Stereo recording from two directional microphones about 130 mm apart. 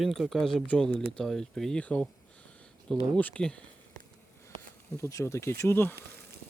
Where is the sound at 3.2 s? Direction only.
10° left (ahead or behind).